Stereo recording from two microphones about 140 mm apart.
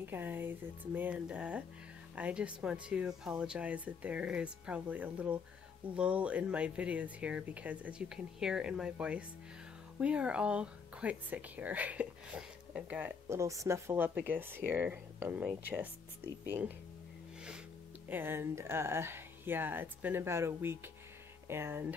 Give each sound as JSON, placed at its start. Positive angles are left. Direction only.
{"t": 0.0, "sound": "speech", "side_deg": -15}
{"t": 18.0, "sound": "speech", "side_deg": -15}